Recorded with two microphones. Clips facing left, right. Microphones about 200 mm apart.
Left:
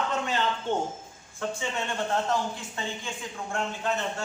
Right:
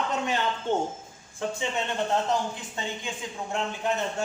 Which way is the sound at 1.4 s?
15° right (ahead or behind).